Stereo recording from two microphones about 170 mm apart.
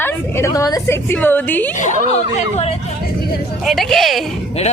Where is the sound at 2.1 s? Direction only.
40° left (ahead or behind).